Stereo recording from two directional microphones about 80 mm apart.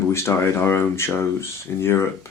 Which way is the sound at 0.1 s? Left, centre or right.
Left.